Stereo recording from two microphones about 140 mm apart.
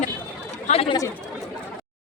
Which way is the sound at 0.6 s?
45° left (ahead or behind).